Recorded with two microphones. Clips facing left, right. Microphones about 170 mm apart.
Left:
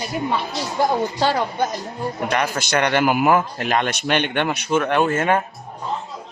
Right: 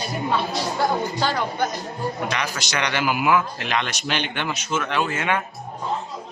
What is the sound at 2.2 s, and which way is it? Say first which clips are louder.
A man's voice: left 5 dB; 55° left (ahead or behind).